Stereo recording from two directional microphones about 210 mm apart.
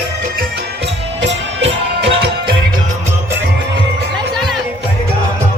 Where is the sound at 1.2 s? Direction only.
55° right (ahead or behind).